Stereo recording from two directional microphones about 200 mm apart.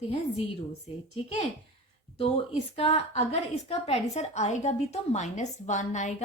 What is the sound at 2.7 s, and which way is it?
A woman's voice, 30° left (ahead or behind).